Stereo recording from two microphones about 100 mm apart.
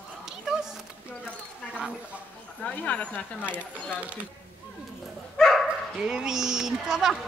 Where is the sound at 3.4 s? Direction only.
15° right (ahead or behind).